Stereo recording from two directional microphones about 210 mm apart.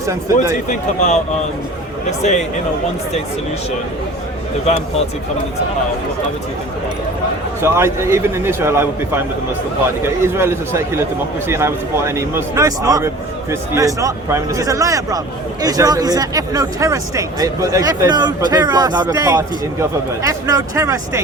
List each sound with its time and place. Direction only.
0.0 s speech: 15° right (ahead or behind)
0.7 s speech: 35° left (ahead or behind)
4.6 s speech: 30° left (ahead or behind)
7.6 s speech: 10° right (ahead or behind)